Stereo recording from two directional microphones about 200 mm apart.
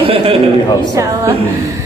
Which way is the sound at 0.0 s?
25° right (ahead or behind).